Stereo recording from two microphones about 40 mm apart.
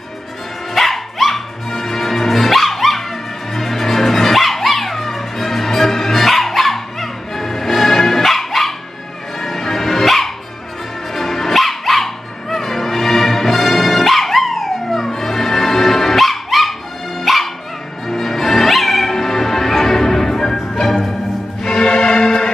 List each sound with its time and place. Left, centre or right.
0.7 s dog: centre
9.4 s music: centre
11.1 s dog: centre
18.0 s music: centre